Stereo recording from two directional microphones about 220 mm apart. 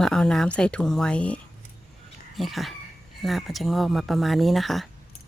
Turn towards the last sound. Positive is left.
turn(degrees=0)  # may be behind; listen again after turning